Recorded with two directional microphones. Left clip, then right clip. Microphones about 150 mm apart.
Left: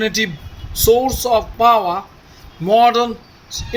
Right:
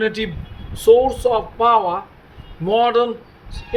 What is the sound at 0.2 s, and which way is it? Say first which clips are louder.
Speech: left 5 dB; 40° left (ahead or behind).